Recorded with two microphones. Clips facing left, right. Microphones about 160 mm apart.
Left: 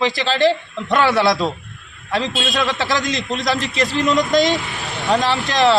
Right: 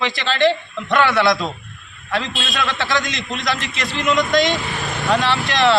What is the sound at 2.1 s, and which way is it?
A man's voice, 35° left (ahead or behind).